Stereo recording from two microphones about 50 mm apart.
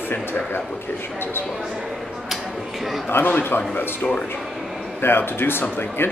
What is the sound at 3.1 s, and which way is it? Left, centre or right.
Speech, left.